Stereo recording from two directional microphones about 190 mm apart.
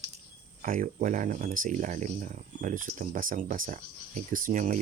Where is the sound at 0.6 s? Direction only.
45° right (ahead or behind).